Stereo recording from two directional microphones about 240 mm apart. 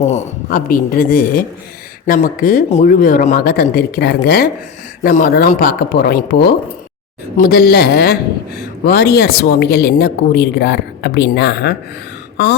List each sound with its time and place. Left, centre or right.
0.0 s a woman's voice: left